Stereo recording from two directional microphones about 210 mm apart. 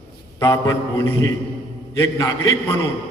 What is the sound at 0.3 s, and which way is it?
Speech, 15° left (ahead or behind).